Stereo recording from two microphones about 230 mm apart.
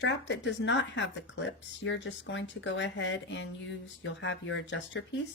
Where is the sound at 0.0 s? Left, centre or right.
Left.